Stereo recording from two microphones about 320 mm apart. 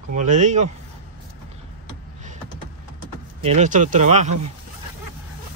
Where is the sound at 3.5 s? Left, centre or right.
Right.